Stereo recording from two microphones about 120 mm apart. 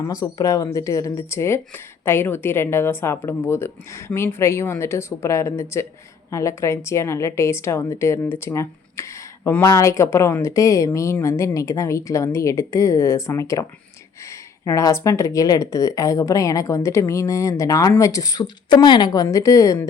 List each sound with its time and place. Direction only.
0.1 s speech: 30° left (ahead or behind)
14.8 s speech: 25° left (ahead or behind)